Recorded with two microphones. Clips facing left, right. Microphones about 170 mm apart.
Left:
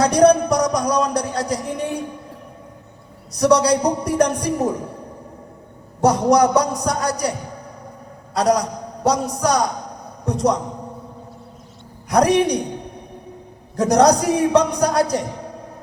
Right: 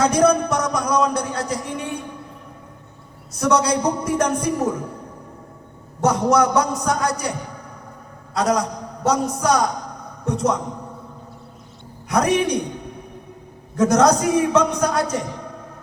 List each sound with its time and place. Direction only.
0.0 s speech: 35° left (ahead or behind)
3.3 s speech: 35° left (ahead or behind)
6.0 s speech: 35° left (ahead or behind)
8.4 s speech: 35° left (ahead or behind)
10.0 s a sound: 35° left (ahead or behind)
12.0 s speech: 35° left (ahead or behind)
13.7 s speech: 35° left (ahead or behind)